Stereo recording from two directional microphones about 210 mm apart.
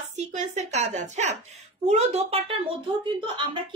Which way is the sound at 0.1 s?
35° right (ahead or behind).